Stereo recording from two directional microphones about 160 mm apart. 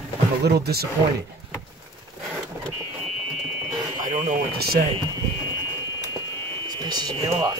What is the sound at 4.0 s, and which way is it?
Speech, 55° right (ahead or behind).